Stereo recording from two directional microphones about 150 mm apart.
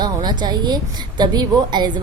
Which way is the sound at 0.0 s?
30° right (ahead or behind).